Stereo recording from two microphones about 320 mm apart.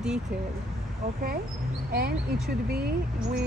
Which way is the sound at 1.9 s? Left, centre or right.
Right.